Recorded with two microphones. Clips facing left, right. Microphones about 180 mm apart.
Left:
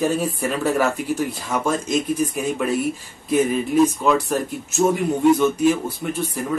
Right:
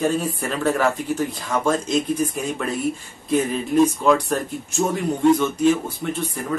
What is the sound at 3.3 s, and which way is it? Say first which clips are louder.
Speech: left 2 dB; 5° left (ahead or behind).